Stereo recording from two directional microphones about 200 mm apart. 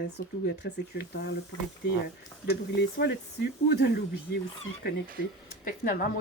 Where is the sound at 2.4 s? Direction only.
55° left (ahead or behind).